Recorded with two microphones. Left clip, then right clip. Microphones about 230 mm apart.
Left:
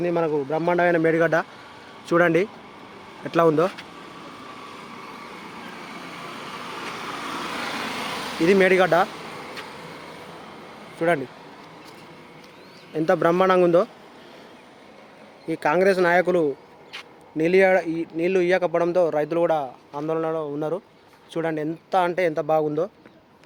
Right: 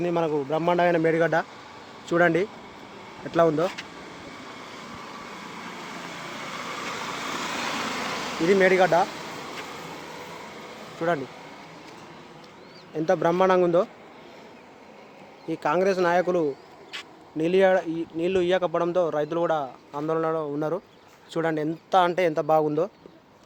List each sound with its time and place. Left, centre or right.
0.0 s a man's voice: centre; by 3.7 s left
7.3 s vehicle: centre
8.4 s speech: left
13.1 s speech: left
15.4 s speech: left
19.9 s speech: centre